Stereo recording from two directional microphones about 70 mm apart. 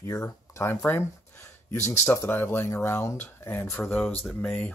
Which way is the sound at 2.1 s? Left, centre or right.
Left.